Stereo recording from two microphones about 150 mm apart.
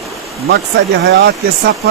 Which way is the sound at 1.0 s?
90° right.